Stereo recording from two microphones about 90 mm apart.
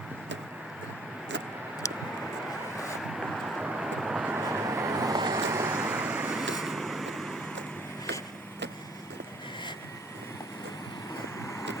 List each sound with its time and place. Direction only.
1.8 s vehicle: 35° left (ahead or behind)
2.7 s vehicle: centre (ahead or behind)
4.4 s vehicle: 35° right (ahead or behind)
5.5 s vehicle: 30° right (ahead or behind)
5.8 s vehicle: 15° right (ahead or behind); by 7.3 s centre (ahead or behind)